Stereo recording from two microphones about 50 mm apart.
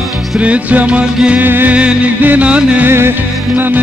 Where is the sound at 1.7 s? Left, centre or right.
Right.